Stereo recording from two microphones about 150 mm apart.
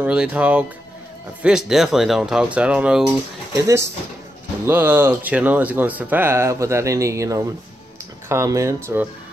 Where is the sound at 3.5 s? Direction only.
20° right (ahead or behind).